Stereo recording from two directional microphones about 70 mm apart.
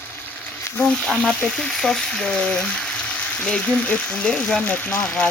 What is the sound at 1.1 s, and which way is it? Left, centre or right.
Speech, centre.